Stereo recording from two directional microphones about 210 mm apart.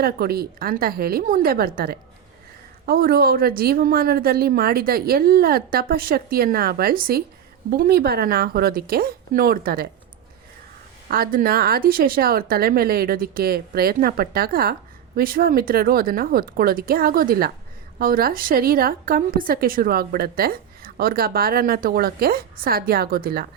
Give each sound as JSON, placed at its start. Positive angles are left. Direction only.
{"t": 0.0, "sound": "a woman's voice", "side_deg": -45}
{"t": 11.1, "sound": "a woman's voice", "side_deg": -45}